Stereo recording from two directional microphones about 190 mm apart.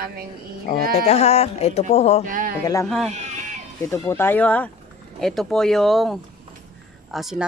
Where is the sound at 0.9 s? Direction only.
35° left (ahead or behind).